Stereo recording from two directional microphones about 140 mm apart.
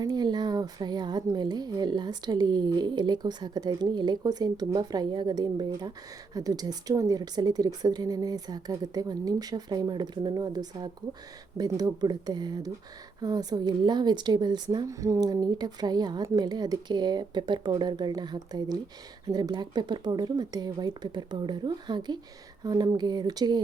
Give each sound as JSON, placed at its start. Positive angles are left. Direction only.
{"t": 0.0, "sound": "a woman's voice", "side_deg": -30}